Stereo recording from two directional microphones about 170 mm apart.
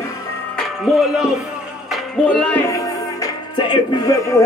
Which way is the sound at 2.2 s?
5° left (ahead or behind).